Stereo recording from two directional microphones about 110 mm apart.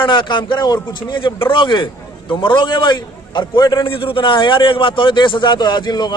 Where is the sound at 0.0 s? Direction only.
45° left (ahead or behind).